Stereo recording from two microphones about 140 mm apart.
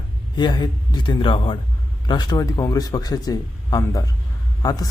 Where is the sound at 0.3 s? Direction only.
30° left (ahead or behind).